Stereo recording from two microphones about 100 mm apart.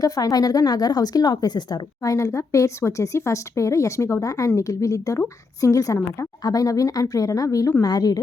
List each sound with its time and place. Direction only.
0.0 s speech: 40° left (ahead or behind)
2.1 s speech: 30° left (ahead or behind)